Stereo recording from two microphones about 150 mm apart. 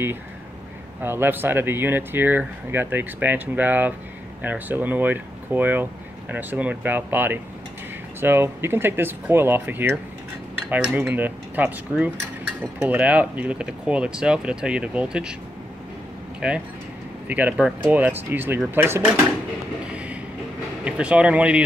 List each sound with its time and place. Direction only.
1.0 s speech: 15° right (ahead or behind)
16.3 s speech: 5° right (ahead or behind)
20.8 s speech: 10° right (ahead or behind)